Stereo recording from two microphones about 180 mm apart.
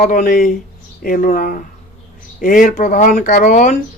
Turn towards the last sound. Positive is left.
turn(degrees=40)  # may be behind; listen again after turning